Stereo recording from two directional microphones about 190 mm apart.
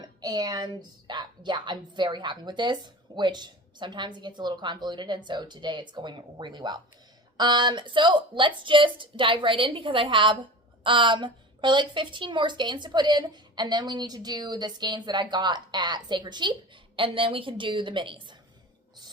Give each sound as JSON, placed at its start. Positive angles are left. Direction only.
{"t": 0.0, "sound": "a woman's voice", "side_deg": -20}